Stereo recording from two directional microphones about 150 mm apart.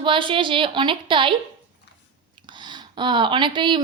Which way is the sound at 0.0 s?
35° right (ahead or behind).